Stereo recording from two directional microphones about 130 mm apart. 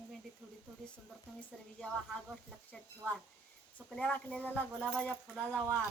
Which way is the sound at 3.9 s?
10° left (ahead or behind).